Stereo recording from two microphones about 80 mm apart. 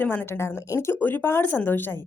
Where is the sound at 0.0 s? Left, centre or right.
Left.